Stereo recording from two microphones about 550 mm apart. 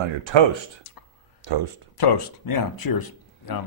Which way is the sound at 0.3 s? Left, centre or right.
Right.